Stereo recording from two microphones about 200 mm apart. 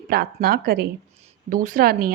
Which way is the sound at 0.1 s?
50° right (ahead or behind).